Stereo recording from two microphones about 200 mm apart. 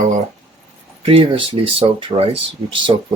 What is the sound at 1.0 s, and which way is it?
Speech, 30° right (ahead or behind).